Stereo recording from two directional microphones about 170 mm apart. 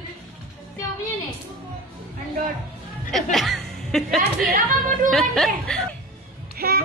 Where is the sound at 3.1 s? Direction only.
Centre (ahead or behind).